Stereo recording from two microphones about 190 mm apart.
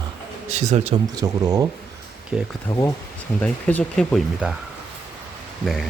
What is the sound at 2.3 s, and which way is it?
Speech, centre (ahead or behind).